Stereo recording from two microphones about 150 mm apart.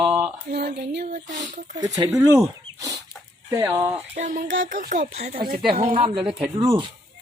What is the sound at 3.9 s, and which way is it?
Speech, 55° right (ahead or behind).